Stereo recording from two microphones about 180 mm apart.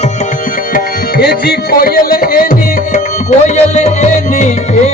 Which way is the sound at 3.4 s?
40° left (ahead or behind).